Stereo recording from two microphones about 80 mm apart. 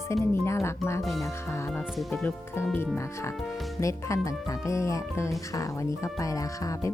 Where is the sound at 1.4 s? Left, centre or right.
Left.